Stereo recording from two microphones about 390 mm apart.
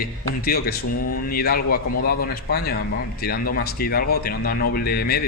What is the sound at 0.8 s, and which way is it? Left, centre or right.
Speech, left.